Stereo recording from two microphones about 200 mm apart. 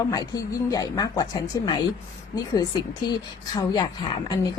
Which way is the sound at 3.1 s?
20° left (ahead or behind).